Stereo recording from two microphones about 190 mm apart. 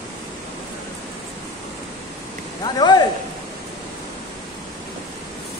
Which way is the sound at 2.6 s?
20° left (ahead or behind).